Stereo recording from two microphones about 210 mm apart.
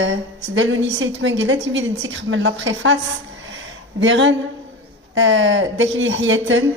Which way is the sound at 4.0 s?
60° right (ahead or behind).